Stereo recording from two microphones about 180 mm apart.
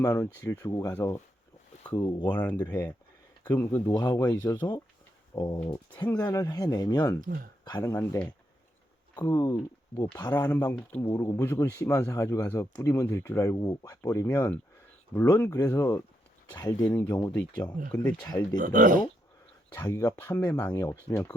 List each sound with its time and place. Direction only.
0.4 s speech: 20° left (ahead or behind)
2.4 s speech: 10° left (ahead or behind)
3.9 s speech: 25° left (ahead or behind)
5.3 s a sound: 20° left (ahead or behind)
5.7 s speech: 10° left (ahead or behind)
7.2 s speech: 55° right (ahead or behind)
7.6 s speech: 20° left (ahead or behind)
9.3 s speech: 20° left (ahead or behind)
10.7 s speech: 10° left (ahead or behind)
18.5 s speech: 45° right (ahead or behind)
19.7 s speech: 15° left (ahead or behind)